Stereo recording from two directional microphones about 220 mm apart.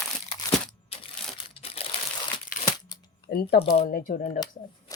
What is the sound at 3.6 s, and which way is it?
Speech, 25° left (ahead or behind).